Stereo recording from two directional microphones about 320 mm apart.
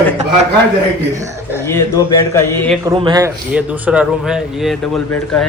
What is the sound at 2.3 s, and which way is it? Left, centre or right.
Speech, centre.